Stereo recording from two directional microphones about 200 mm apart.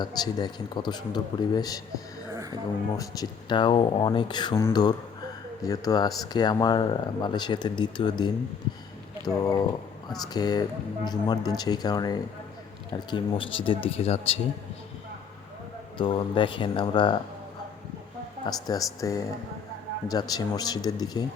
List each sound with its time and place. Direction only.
0.0 s speech: 20° left (ahead or behind)
2.3 s a sound: 15° right (ahead or behind)
3.0 s speech: 20° left (ahead or behind)
9.2 s speech: 20° left (ahead or behind)
16.0 s speech: 25° left (ahead or behind)
18.4 s speech: 20° left (ahead or behind)